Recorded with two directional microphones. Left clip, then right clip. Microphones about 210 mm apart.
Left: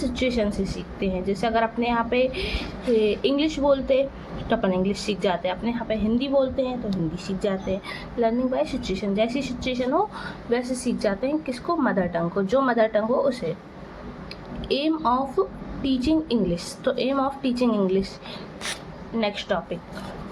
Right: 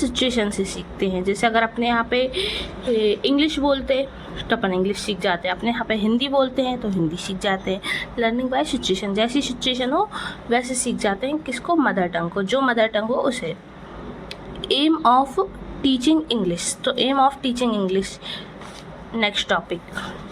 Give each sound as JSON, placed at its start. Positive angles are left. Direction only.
{"t": 0.2, "sound": "a woman's voice", "side_deg": -25}
{"t": 14.7, "sound": "a woman's voice", "side_deg": -25}
{"t": 19.1, "sound": "a woman's voice", "side_deg": -25}